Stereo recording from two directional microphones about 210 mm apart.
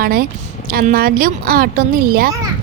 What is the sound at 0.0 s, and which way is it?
A woman's voice, 45° right (ahead or behind).